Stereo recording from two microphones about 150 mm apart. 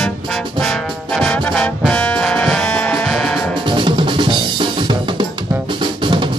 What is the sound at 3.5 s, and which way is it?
Drum kit, 35° right (ahead or behind).